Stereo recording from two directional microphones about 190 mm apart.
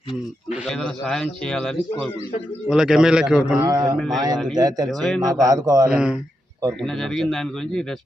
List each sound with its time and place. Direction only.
0.6 s a man's voice: centre (ahead or behind)
3.6 s a man's voice: 20° right (ahead or behind)
3.9 s a man's voice: centre (ahead or behind)
4.5 s a man's voice: 20° right (ahead or behind)
4.9 s a man's voice: centre (ahead or behind)
5.2 s a man's voice: 20° right (ahead or behind)
5.9 s a man's voice: 5° right (ahead or behind)